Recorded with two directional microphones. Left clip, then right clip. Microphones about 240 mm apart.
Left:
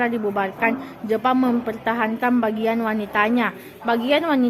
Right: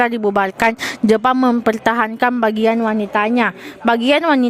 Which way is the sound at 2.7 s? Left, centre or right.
Right.